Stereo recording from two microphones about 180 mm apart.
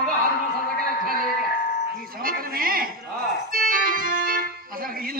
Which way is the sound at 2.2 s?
55° right (ahead or behind).